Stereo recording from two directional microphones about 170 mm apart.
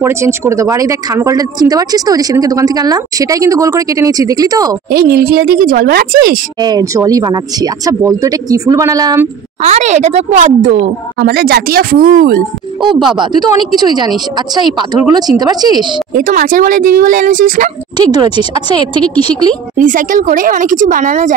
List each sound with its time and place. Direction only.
0.0 s speech: 15° right (ahead or behind)
4.9 s speech: 65° right (ahead or behind)
6.6 s speech: 20° right (ahead or behind)
9.6 s speech: 40° right (ahead or behind)
11.1 s speech: 70° right (ahead or behind)
12.8 s speech: 30° right (ahead or behind)
16.2 s speech: 55° right (ahead or behind)
17.9 s speech: 25° right (ahead or behind)
19.8 s speech: 50° right (ahead or behind)